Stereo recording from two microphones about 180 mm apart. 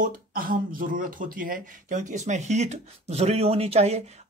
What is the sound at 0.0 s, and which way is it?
Speech, 50° right (ahead or behind).